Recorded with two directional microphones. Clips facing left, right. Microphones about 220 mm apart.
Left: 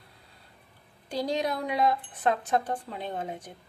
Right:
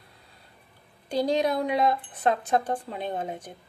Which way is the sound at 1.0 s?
20° right (ahead or behind).